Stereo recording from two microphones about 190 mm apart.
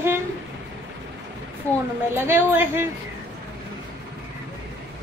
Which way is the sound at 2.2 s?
10° right (ahead or behind).